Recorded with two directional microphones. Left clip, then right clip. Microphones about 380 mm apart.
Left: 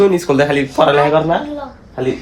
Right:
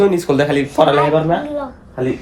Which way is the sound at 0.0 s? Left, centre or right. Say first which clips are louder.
Left 2 dB; centre.